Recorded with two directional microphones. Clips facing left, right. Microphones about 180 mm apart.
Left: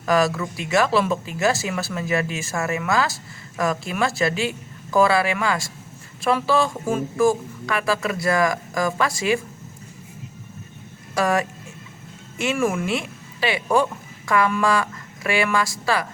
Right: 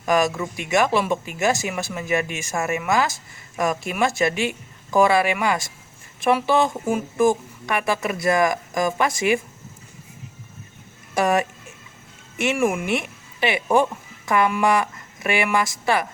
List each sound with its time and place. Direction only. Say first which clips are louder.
0.0 s a woman's voice: even; 20° right (ahead or behind)
11.1 s a woman's voice: right 1 dB; 20° right (ahead or behind)